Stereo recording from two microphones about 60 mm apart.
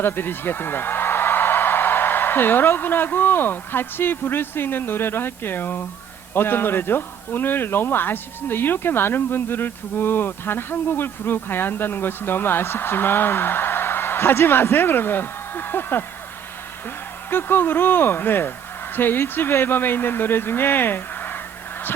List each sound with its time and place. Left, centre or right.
0.0 s a man's voice: left
17.2 s speech: left